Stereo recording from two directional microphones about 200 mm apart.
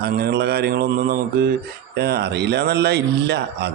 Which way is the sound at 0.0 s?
55° right (ahead or behind).